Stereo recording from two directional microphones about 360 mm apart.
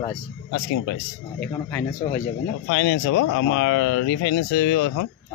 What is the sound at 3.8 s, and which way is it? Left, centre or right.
Speech, left.